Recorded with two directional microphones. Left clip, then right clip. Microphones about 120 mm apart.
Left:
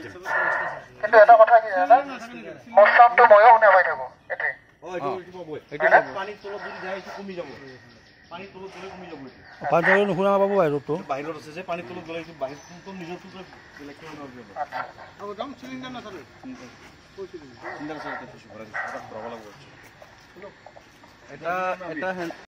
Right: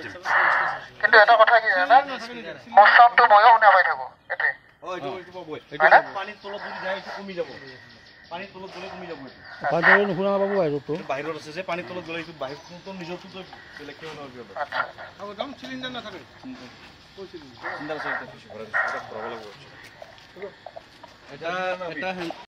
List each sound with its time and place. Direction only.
0.2 s a sound: 10° left (ahead or behind)
2.7 s speech: 5° left (ahead or behind)
5.8 s speech: 10° left (ahead or behind)
6.9 s speech: centre (ahead or behind)
9.5 s speech: 15° left (ahead or behind)
11.1 s a man's voice: 55° right (ahead or behind)
14.6 s speech: 5° left (ahead or behind)
15.2 s speech: 75° right (ahead or behind)
17.9 s speech: 15° right (ahead or behind)
21.5 s a man's voice: 20° right (ahead or behind)